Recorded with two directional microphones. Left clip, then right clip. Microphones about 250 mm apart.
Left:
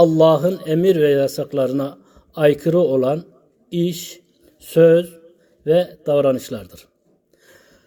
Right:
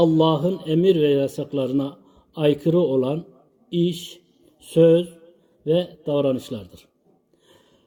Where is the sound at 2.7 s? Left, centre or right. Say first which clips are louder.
Left 4 dB; centre.